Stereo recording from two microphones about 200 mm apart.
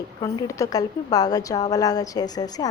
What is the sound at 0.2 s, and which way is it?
A woman's voice, 15° left (ahead or behind).